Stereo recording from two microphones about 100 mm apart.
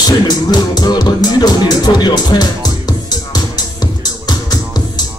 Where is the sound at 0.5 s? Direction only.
45° left (ahead or behind).